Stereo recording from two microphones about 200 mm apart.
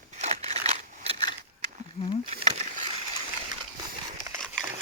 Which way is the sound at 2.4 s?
30° right (ahead or behind).